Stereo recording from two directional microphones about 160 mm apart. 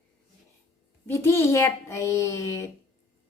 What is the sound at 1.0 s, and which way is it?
A woman's voice, 15° left (ahead or behind).